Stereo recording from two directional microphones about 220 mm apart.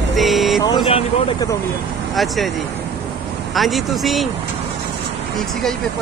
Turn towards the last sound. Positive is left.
turn(degrees=0)  # may be behind; listen again after turning